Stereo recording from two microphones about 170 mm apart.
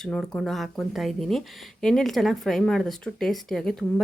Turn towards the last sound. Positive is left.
turn(degrees=5)  # may be behind; listen again after turning